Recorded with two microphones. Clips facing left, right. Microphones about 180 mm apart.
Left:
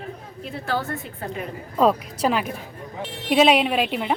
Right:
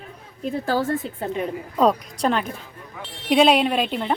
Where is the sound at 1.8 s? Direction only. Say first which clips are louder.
Even; 5° left (ahead or behind).